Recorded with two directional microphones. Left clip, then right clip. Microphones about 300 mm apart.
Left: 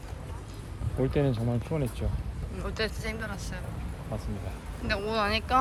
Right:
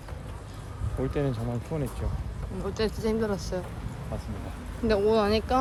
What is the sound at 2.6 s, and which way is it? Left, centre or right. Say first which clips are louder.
Speech: right 4 dB; centre.